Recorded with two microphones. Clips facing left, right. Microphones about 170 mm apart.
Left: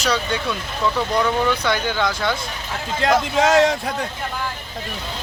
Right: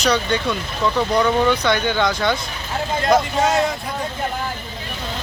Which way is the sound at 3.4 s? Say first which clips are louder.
Left 3 dB; 90° left.